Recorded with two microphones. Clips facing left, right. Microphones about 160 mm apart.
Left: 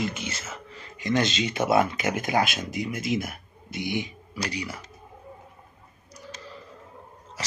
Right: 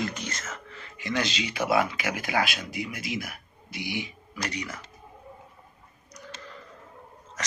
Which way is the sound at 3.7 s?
50° left (ahead or behind).